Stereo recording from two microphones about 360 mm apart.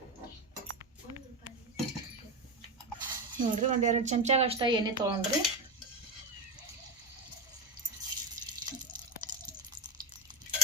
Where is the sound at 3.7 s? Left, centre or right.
Centre.